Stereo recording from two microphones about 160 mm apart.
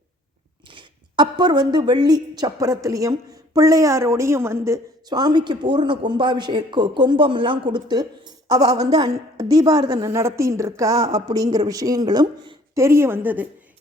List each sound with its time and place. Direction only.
0.7 s a woman's voice: 30° right (ahead or behind); by 13.5 s 10° right (ahead or behind)